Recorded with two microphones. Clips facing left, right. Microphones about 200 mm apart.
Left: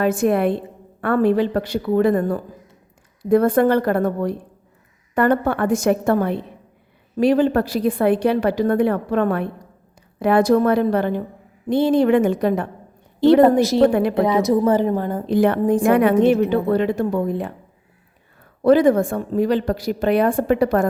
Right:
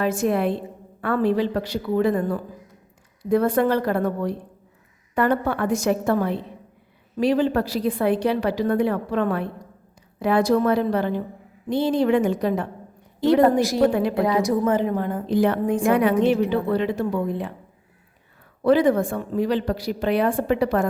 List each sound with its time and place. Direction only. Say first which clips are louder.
0.0 s a woman's voice: left 4 dB; 55° left (ahead or behind)
13.4 s a woman's voice: left 4 dB; 25° left (ahead or behind)
14.7 s a woman's voice: left 3 dB; 35° left (ahead or behind)
15.3 s a woman's voice: left 4 dB; 60° left (ahead or behind)
18.6 s a woman's voice: left 4 dB; 45° left (ahead or behind)